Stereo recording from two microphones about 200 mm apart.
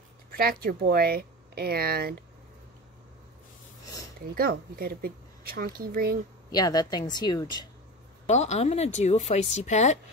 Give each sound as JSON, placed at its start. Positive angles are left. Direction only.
{"t": 0.4, "sound": "speech", "side_deg": -50}
{"t": 4.4, "sound": "speech", "side_deg": -50}
{"t": 6.5, "sound": "speech", "side_deg": 20}
{"t": 8.3, "sound": "speech", "side_deg": 35}